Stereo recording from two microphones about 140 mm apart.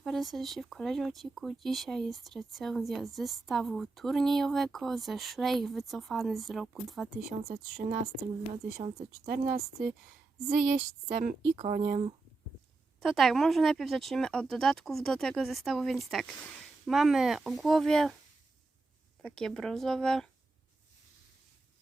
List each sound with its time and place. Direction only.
0.0 s speech: centre (ahead or behind)
7.8 s speech: 60° right (ahead or behind)
9.2 s speech: 90° right
10.5 s speech: 70° right (ahead or behind)
11.5 s speech: 55° right (ahead or behind)
13.0 s speech: centre (ahead or behind)
19.2 s speech: 5° left (ahead or behind)